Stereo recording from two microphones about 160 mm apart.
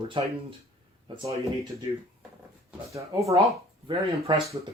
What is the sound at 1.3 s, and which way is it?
Speech, 35° right (ahead or behind).